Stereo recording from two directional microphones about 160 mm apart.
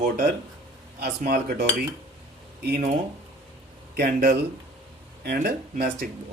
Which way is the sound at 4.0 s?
70° right (ahead or behind).